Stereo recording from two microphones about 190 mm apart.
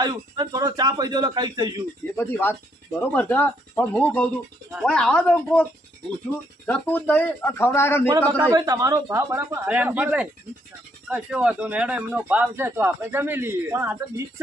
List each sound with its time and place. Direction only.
0.0 s a man's voice: 20° right (ahead or behind)
2.1 s speech: 10° left (ahead or behind)
6.7 s speech: 5° left (ahead or behind)
8.4 s speech: 20° right (ahead or behind)